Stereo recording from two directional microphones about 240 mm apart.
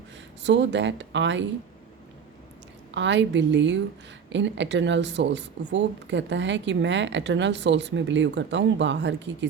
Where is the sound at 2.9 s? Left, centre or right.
Right.